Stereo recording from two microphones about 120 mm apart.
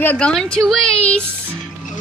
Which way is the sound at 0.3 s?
Centre (ahead or behind).